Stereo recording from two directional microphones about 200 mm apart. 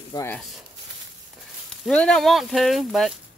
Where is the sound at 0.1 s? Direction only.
15° left (ahead or behind).